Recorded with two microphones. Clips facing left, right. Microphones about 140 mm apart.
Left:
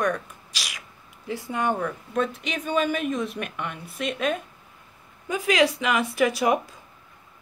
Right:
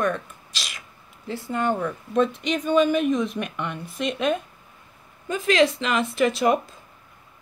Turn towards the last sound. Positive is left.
turn(degrees=10)  # may be behind; listen again after turning